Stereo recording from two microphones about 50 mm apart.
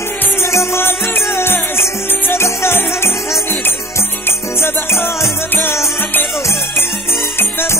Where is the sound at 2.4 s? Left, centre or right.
Left.